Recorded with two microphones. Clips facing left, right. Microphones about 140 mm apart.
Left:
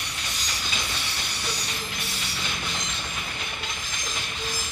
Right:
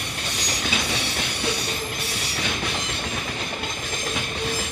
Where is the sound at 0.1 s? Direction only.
65° right (ahead or behind).